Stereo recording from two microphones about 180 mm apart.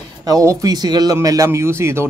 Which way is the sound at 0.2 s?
20° right (ahead or behind).